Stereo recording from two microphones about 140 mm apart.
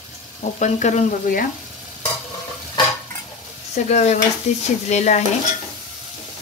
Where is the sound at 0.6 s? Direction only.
60° left (ahead or behind).